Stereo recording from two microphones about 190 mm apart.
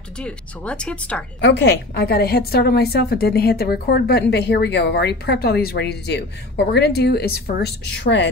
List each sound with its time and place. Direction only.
0.2 s speech: 5° left (ahead or behind)
1.4 s a woman's voice: 65° left (ahead or behind)